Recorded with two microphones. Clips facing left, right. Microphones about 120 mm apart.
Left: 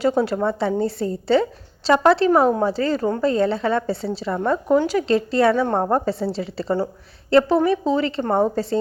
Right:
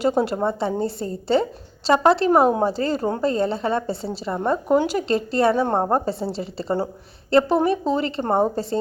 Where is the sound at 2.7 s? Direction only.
40° right (ahead or behind).